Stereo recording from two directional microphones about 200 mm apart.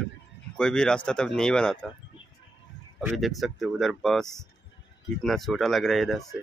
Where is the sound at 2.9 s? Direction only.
Centre (ahead or behind).